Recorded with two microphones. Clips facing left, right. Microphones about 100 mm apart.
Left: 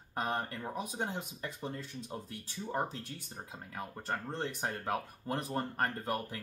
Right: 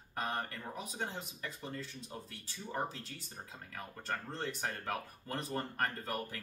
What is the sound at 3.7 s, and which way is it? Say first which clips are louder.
Speech: left 3 dB; 20° left (ahead or behind).